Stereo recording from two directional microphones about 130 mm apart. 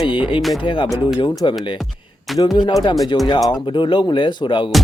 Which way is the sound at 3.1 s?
40° left (ahead or behind).